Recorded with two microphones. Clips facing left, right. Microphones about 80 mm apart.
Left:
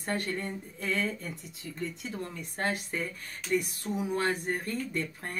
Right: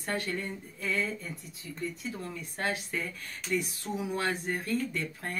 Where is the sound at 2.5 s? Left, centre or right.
Left.